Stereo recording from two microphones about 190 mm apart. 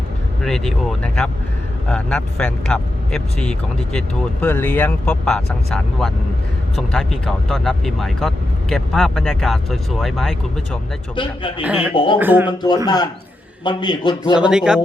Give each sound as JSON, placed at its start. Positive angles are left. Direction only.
{"t": 0.4, "sound": "speech", "side_deg": 0}
{"t": 11.1, "sound": "a man's voice", "side_deg": 25}
{"t": 11.6, "sound": "speech", "side_deg": -5}
{"t": 12.5, "sound": "a man's voice", "side_deg": 20}
{"t": 14.3, "sound": "speech", "side_deg": -5}